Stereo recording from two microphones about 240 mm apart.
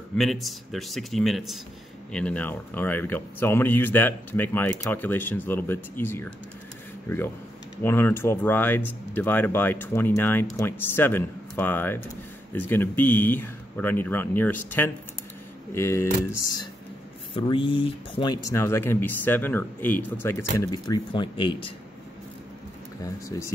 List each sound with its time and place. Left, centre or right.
0.2 s speech: centre
7.8 s speech: centre
17.3 s speech: left